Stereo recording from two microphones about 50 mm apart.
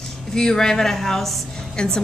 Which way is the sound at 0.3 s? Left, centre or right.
Centre.